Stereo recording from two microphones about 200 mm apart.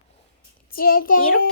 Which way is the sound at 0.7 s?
45° left (ahead or behind).